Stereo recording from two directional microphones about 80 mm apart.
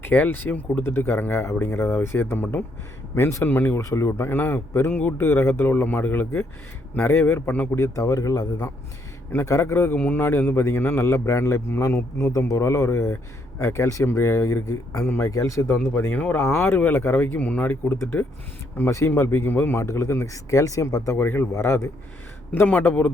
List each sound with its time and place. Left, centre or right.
0.0 s a man's voice: left
3.8 s speech: left
7.8 s a man's voice: left
9.3 s a man's voice: left
18.9 s a man's voice: left
22.5 s speech: left